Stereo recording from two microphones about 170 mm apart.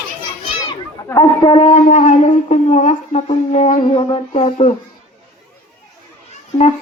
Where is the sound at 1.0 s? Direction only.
20° left (ahead or behind); by 4.7 s 40° left (ahead or behind).